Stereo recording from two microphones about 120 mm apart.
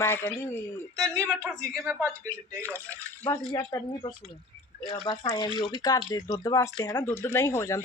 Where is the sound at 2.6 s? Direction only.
15° left (ahead or behind).